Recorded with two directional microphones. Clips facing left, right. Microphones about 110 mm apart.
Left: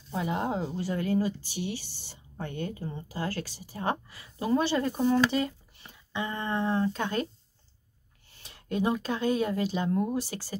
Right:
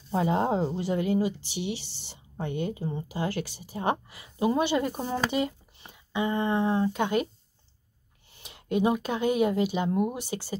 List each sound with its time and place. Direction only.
0.1 s speech: 30° right (ahead or behind)
0.7 s speech: 20° right (ahead or behind)
8.4 s speech: 20° right (ahead or behind)